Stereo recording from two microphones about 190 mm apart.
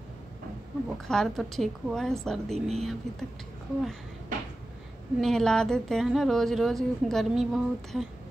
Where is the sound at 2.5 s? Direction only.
35° right (ahead or behind).